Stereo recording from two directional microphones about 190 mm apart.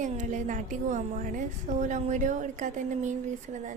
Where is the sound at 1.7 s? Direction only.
40° right (ahead or behind).